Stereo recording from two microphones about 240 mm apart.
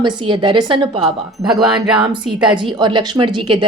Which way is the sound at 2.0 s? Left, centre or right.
Centre.